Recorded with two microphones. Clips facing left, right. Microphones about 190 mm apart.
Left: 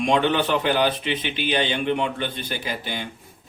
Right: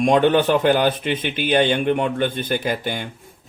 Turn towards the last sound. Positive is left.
turn(degrees=-50)  # may be behind; listen again after turning